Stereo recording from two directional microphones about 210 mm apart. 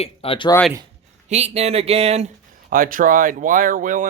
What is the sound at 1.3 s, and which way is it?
Speech, 30° right (ahead or behind).